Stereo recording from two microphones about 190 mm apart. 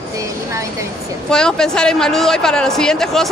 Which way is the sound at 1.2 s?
5° left (ahead or behind).